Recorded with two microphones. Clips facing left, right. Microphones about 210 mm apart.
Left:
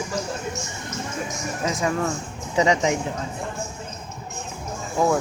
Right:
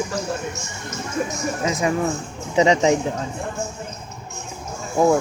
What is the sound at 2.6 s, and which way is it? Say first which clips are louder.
Speech: right 4 dB; 25° right (ahead or behind).